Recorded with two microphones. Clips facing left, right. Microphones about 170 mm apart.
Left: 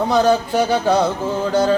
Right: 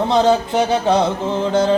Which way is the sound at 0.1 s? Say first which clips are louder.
Right 1 dB; 25° right (ahead or behind).